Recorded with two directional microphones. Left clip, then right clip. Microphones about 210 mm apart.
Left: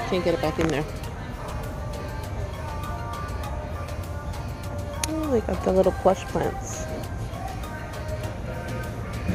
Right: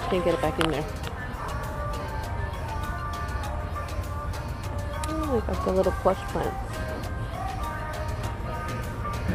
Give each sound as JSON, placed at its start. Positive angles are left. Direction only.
{"t": 0.1, "sound": "speech", "side_deg": 0}
{"t": 5.0, "sound": "speech", "side_deg": 0}